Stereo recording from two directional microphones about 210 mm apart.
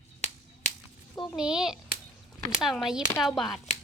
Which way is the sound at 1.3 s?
5° right (ahead or behind).